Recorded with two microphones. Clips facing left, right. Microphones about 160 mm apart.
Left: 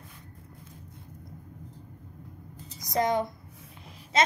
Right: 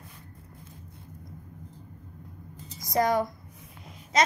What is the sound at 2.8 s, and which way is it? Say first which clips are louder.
Speech: right 2 dB; 20° left (ahead or behind).